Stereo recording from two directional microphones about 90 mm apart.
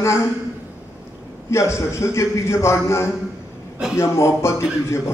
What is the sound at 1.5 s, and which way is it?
A man's voice, 35° left (ahead or behind).